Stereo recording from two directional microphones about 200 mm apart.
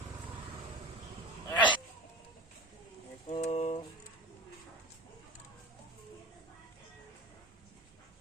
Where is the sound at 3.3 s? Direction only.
30° left (ahead or behind).